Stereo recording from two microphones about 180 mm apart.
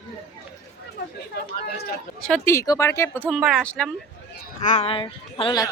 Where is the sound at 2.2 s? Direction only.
5° left (ahead or behind).